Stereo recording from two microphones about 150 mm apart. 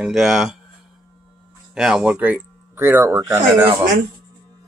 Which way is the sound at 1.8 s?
5° right (ahead or behind).